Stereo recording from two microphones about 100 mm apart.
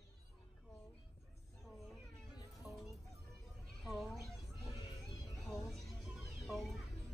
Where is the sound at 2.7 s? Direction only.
15° right (ahead or behind).